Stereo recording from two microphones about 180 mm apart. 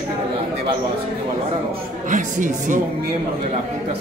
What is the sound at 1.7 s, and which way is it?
Speech, 45° right (ahead or behind).